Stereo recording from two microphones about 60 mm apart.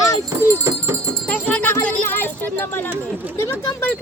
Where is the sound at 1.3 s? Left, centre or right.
Left.